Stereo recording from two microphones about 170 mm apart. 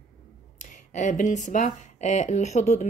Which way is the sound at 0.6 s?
45° left (ahead or behind).